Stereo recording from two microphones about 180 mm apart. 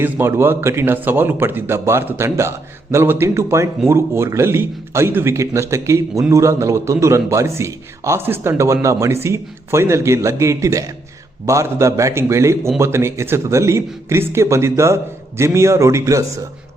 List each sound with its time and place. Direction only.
0.0 s a man's voice: 15° right (ahead or behind)